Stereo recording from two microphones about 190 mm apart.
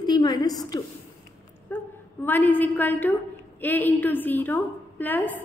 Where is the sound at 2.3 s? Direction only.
10° left (ahead or behind).